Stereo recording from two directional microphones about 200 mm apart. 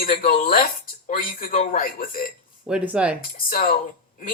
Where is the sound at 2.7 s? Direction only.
5° right (ahead or behind).